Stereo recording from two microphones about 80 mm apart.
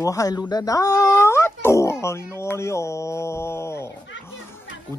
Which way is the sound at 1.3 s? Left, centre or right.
Left.